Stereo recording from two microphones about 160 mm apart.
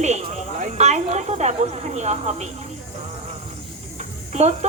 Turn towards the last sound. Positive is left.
turn(degrees=-45)  # may be behind; listen again after turning